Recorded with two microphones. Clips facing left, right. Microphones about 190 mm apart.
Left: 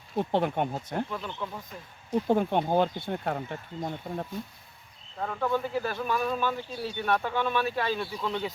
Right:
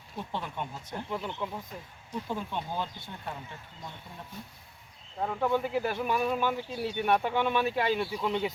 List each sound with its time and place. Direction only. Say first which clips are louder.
0.2 s speech: left 10 dB; 65° left (ahead or behind)
1.1 s speech: right 1 dB; 15° right (ahead or behind)
2.2 s speech: left 11 dB; 60° left (ahead or behind)
3.8 s speech: left 13 dB; 50° left (ahead or behind)
5.2 s speech: even; 15° right (ahead or behind)